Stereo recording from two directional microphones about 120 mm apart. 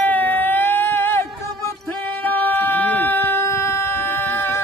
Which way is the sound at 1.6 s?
20° left (ahead or behind).